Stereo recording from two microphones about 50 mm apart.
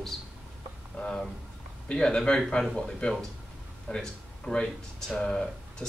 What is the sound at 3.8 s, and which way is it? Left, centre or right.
Speech, centre.